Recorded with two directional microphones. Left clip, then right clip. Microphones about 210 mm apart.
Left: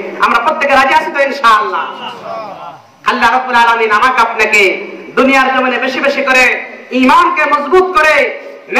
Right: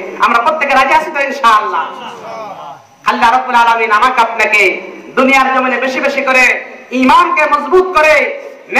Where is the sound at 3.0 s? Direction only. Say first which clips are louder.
Even; 30° right (ahead or behind).